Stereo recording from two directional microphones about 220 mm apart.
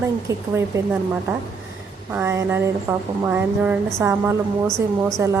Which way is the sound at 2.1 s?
10° right (ahead or behind).